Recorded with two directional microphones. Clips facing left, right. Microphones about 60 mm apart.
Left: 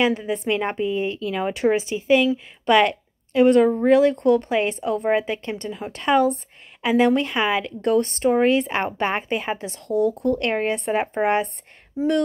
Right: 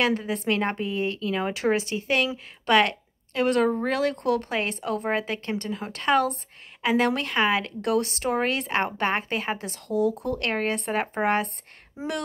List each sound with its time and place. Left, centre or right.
0.5 s a woman's voice: centre
8.4 s a woman's voice: centre
10.4 s a woman's voice: centre
12.0 s speech: right